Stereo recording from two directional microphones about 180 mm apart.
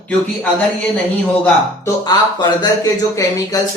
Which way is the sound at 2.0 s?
25° left (ahead or behind).